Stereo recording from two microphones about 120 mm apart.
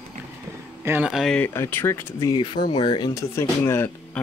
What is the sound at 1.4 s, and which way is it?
Speech, 20° left (ahead or behind).